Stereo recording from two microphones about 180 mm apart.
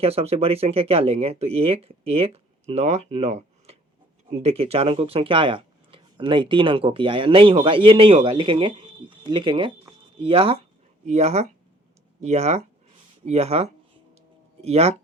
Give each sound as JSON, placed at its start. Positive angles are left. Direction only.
{"t": 0.0, "sound": "speech", "side_deg": -35}